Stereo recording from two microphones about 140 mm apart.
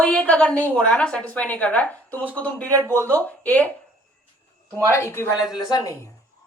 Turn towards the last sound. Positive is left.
turn(degrees=25)  # may be behind; listen again after turning